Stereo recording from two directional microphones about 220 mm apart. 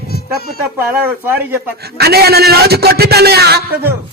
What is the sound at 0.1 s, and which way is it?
Music, 45° left (ahead or behind).